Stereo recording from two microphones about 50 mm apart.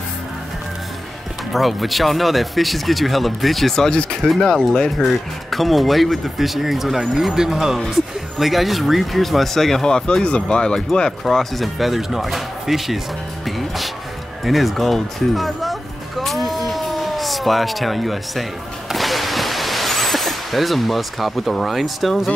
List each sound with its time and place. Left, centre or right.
1.5 s speech: centre
11.2 s speech: centre
13.5 s music: centre
18.9 s vehicle: centre